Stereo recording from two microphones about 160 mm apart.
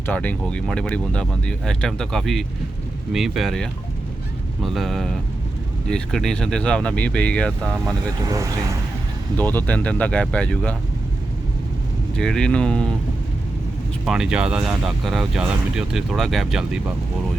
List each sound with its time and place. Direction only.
0.0 s speech: 10° left (ahead or behind)
8.3 s speech: 20° right (ahead or behind)
9.4 s speech: 10° left (ahead or behind)
12.1 s speech: 5° left (ahead or behind)
14.0 s speech: 5° right (ahead or behind)